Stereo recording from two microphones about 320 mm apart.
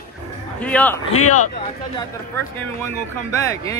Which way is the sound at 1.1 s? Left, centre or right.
Left.